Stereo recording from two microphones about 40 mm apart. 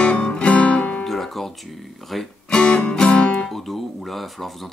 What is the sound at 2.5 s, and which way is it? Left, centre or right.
Music, left.